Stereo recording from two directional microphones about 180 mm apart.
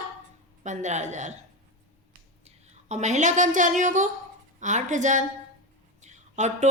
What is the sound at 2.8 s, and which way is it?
A woman's voice, 40° right (ahead or behind).